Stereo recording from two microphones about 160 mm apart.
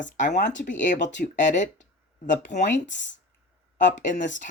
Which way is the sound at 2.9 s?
90° left.